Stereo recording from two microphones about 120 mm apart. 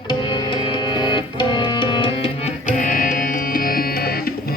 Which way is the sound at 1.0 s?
40° left (ahead or behind).